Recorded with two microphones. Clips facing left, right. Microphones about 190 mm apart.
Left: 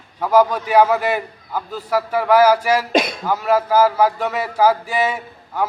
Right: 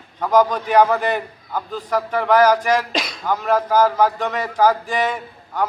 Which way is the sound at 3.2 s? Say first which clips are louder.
Left 1 dB; 5° left (ahead or behind).